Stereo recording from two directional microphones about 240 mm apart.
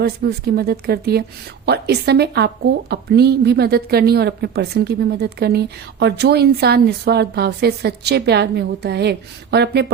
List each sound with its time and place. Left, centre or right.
0.0 s a woman's voice: right